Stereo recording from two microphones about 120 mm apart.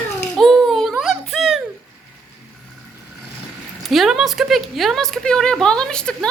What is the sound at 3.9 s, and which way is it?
Speech, centre (ahead or behind).